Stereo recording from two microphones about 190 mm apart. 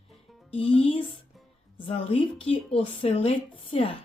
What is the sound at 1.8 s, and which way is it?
Speech, 30° left (ahead or behind).